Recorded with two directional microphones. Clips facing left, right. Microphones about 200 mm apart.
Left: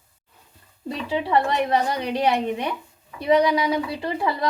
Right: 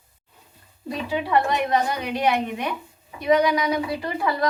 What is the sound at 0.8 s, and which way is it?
A woman's voice, 25° left (ahead or behind).